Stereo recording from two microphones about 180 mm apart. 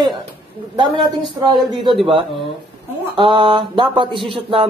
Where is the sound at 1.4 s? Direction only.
25° right (ahead or behind).